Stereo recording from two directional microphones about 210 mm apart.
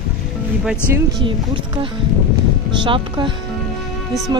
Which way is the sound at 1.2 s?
25° right (ahead or behind).